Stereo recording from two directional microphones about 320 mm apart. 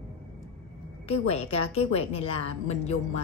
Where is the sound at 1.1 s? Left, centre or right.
Centre.